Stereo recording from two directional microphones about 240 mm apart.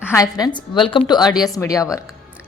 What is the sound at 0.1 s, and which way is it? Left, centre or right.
A woman's voice, centre.